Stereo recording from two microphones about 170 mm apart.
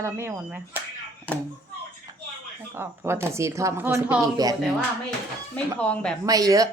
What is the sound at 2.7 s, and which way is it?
Speech, 15° right (ahead or behind).